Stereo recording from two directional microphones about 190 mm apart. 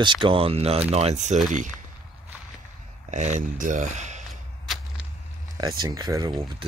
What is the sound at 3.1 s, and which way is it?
Speech, 40° right (ahead or behind).